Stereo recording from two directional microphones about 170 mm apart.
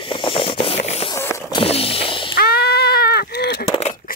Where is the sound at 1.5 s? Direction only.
35° left (ahead or behind).